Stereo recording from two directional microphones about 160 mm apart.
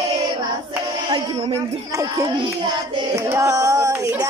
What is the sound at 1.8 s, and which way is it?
Speech, 20° right (ahead or behind).